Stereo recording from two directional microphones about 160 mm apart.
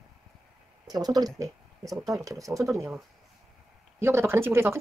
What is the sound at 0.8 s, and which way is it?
Speech, 25° right (ahead or behind).